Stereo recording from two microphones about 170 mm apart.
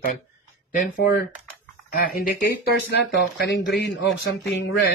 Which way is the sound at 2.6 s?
75° left (ahead or behind).